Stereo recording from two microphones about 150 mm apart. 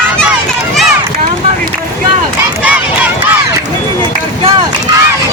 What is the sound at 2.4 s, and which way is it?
Crowd, 10° right (ahead or behind).